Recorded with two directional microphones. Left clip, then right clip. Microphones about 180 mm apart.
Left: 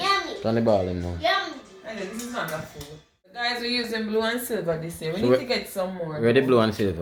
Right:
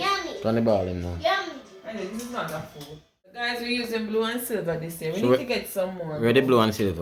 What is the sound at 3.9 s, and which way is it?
Speech, 5° left (ahead or behind).